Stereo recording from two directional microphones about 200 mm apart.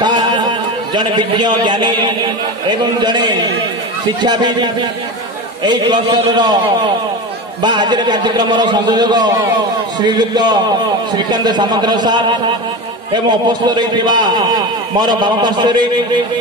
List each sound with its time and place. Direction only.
0.0 s music: 20° right (ahead or behind)
0.9 s a man's voice: 20° right (ahead or behind)
7.6 s a man's voice: 20° right (ahead or behind)